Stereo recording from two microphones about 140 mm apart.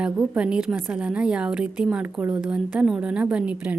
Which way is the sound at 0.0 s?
5° right (ahead or behind).